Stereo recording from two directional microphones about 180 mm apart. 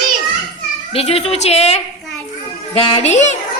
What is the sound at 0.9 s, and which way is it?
A child's voice, 35° left (ahead or behind).